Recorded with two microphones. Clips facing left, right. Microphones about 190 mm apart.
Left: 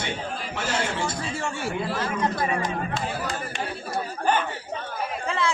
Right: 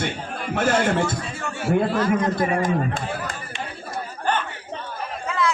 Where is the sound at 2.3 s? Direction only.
50° right (ahead or behind).